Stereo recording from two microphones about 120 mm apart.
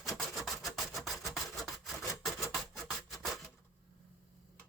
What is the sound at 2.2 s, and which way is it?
Filing, centre (ahead or behind).